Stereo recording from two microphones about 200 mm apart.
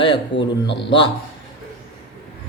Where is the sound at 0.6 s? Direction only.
60° left (ahead or behind).